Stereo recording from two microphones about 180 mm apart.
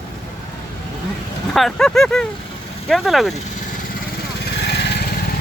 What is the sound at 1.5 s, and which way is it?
Speech, centre (ahead or behind).